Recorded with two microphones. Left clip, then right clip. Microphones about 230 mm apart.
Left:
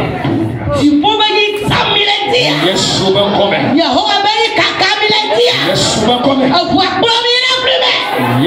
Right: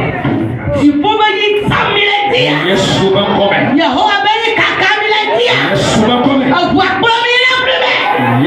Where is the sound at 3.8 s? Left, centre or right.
Left.